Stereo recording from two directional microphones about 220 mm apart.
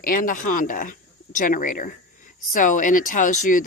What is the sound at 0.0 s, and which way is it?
A woman's voice, 40° left (ahead or behind).